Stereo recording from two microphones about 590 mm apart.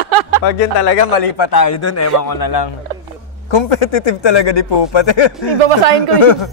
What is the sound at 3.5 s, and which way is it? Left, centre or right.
A man's voice, left.